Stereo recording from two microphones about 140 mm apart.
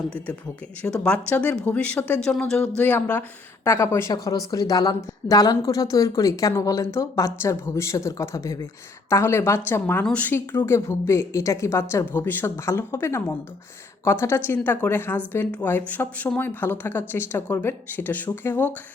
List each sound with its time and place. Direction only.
0.8 s a woman's voice: 10° left (ahead or behind)